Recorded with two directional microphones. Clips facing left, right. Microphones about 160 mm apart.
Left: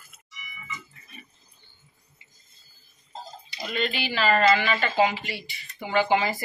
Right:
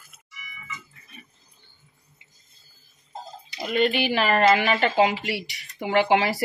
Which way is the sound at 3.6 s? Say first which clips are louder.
Right 7 dB; 55° right (ahead or behind).